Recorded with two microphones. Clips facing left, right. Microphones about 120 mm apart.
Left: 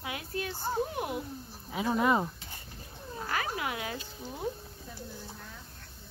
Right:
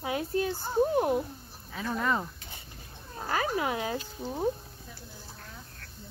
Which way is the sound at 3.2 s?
30° right (ahead or behind).